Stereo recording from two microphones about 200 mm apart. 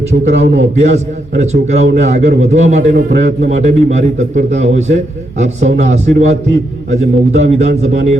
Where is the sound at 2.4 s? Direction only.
35° right (ahead or behind).